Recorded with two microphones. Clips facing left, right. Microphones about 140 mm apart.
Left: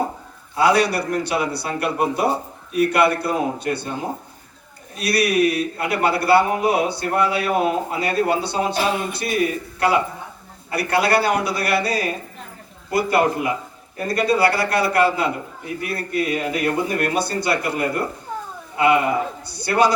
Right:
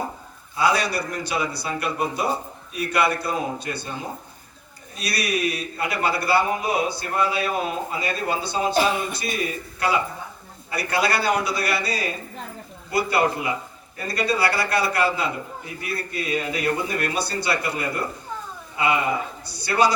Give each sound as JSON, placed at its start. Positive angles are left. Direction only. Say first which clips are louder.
{"t": 0.5, "sound": "a man's voice", "louder": "left 5 dB", "side_deg": 65}